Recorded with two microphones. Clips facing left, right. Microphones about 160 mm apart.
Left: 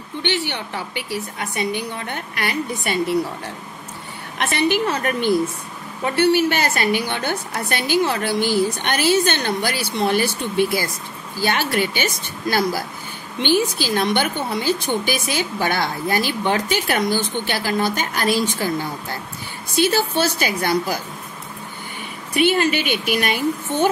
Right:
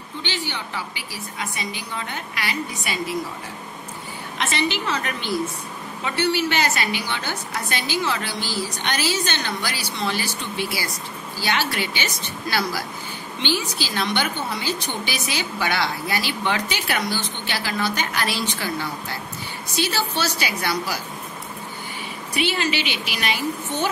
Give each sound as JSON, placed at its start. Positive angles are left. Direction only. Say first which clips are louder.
{"t": 0.2, "sound": "a woman's voice", "louder": "left 6 dB", "side_deg": 65}
{"t": 4.4, "sound": "a woman's voice", "louder": "left 5 dB", "side_deg": 55}
{"t": 22.3, "sound": "a woman's voice", "louder": "left 6 dB", "side_deg": 50}